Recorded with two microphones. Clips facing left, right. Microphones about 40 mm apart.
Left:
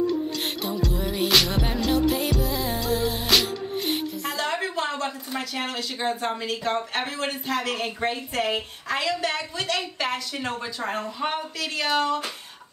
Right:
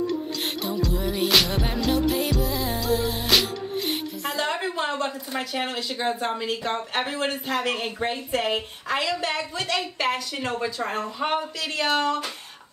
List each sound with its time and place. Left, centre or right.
0.9 s music: centre
4.2 s a sound: centre
4.7 s a woman's voice: centre
5.9 s music: centre
6.6 s a woman's voice: centre
10.5 s music: centre
11.1 s a woman's voice: centre